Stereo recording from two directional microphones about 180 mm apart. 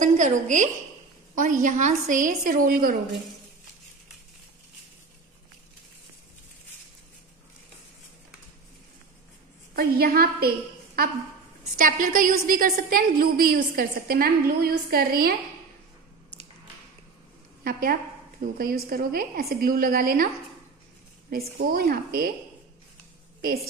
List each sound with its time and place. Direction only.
0.0 s a woman's voice: 45° right (ahead or behind)
9.8 s a woman's voice: 55° right (ahead or behind)
17.6 s a woman's voice: 55° right (ahead or behind)
21.3 s a woman's voice: 55° right (ahead or behind)